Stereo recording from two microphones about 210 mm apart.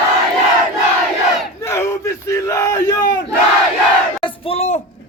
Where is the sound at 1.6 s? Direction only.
10° left (ahead or behind).